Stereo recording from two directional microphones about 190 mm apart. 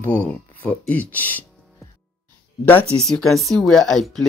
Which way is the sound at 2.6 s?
10° left (ahead or behind).